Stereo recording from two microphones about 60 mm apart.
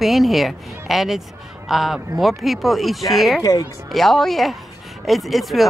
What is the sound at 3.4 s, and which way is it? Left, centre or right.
Speech, left.